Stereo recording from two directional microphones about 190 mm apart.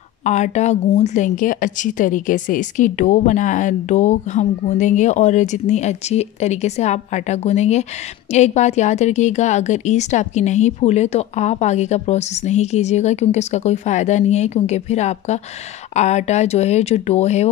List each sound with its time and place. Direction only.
0.2 s a woman's voice: 35° left (ahead or behind)